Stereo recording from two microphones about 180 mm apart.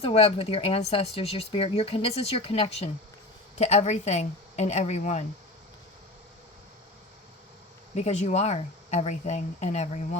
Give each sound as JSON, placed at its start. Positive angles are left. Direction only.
{"t": 0.0, "sound": "speech", "side_deg": 35}
{"t": 7.9, "sound": "speech", "side_deg": 40}